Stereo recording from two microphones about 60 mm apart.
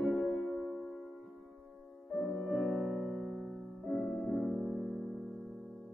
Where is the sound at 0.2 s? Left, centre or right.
Centre.